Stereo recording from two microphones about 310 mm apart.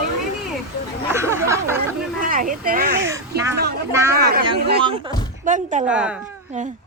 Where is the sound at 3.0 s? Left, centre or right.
Centre.